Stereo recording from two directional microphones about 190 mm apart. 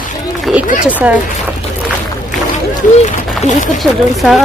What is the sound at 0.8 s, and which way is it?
Speech, 5° right (ahead or behind).